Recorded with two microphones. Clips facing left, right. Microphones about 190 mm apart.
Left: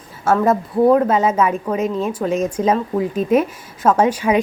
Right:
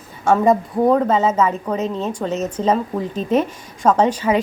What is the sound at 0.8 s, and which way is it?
A woman's voice, 10° left (ahead or behind).